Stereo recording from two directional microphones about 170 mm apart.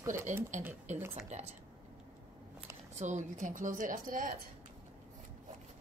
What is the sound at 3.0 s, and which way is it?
Speech, 45° right (ahead or behind).